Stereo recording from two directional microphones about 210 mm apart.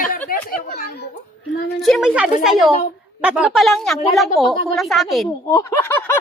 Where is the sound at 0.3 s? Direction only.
45° left (ahead or behind).